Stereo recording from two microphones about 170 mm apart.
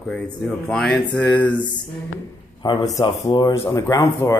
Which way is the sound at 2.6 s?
25° left (ahead or behind).